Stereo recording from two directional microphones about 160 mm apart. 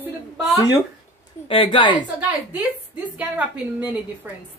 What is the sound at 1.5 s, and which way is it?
Speech, 30° left (ahead or behind).